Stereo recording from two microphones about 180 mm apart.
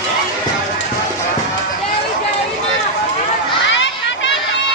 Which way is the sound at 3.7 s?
90° left.